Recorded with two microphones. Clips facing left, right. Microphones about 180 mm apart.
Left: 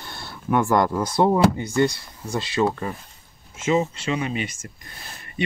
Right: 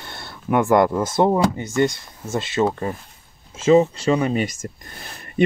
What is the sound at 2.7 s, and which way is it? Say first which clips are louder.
Speech: right 3 dB; 35° right (ahead or behind).